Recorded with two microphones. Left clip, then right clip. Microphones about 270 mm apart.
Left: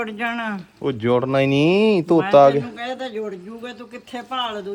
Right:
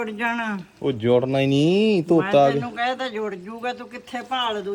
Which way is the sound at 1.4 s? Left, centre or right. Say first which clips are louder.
Left 2 dB; left.